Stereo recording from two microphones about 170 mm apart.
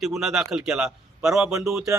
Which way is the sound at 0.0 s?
Centre (ahead or behind).